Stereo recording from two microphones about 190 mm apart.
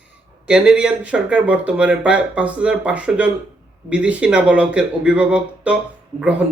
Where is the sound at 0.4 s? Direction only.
5° right (ahead or behind).